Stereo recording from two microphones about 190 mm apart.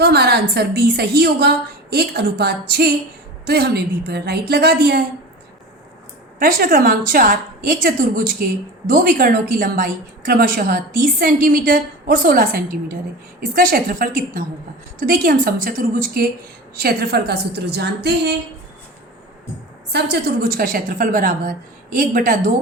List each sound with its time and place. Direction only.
0.0 s a woman's voice: 60° right (ahead or behind)
6.4 s a woman's voice: 50° right (ahead or behind)
19.9 s a woman's voice: 60° right (ahead or behind)